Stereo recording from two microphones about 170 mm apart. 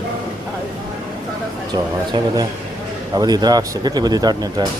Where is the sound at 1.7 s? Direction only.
25° right (ahead or behind).